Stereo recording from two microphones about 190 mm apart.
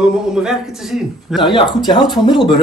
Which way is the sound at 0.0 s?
5° right (ahead or behind).